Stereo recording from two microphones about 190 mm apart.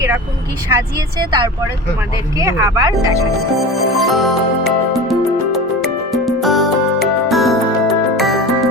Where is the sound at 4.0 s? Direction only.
Centre (ahead or behind).